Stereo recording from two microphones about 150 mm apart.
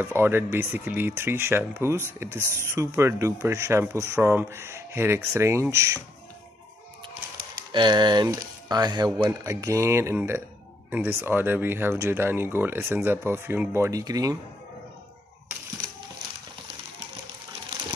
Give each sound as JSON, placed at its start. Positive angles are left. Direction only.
{"t": 0.0, "sound": "speech", "side_deg": -15}
{"t": 7.7, "sound": "speech", "side_deg": -30}